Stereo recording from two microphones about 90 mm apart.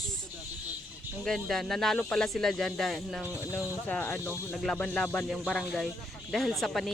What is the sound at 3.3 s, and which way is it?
Speech, 20° right (ahead or behind).